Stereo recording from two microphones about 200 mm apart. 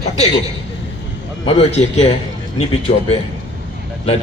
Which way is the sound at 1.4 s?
30° left (ahead or behind).